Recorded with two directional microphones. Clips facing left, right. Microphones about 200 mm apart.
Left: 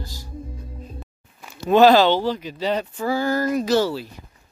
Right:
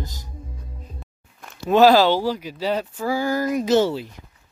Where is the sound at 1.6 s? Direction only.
5° right (ahead or behind); by 4.0 s 20° right (ahead or behind).